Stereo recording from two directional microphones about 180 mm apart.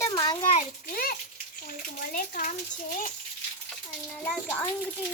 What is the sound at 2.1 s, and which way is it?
Speech, 45° left (ahead or behind).